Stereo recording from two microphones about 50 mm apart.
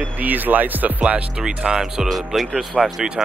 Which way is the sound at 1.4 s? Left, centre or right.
Centre.